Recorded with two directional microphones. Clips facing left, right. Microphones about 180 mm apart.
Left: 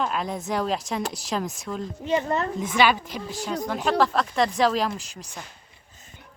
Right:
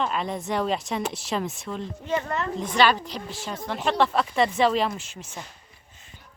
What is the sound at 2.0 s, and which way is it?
A woman's voice, 15° left (ahead or behind).